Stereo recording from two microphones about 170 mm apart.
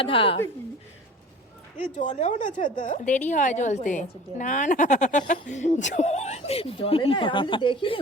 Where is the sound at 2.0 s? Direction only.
45° left (ahead or behind).